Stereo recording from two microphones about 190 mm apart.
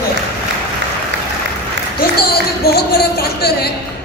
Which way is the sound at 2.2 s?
55° left (ahead or behind).